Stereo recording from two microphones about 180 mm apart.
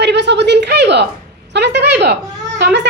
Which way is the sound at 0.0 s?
75° right (ahead or behind).